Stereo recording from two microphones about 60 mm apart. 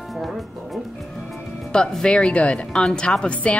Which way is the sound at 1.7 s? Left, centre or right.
Centre.